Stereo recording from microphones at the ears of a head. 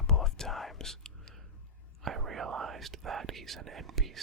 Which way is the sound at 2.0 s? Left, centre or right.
Right.